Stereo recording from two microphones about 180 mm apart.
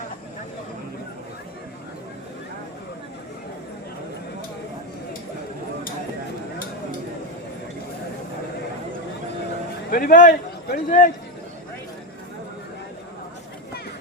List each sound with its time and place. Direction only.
9.9 s a man's voice: 50° left (ahead or behind)